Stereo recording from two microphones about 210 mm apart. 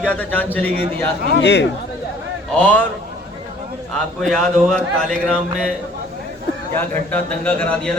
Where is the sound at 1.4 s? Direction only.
50° left (ahead or behind).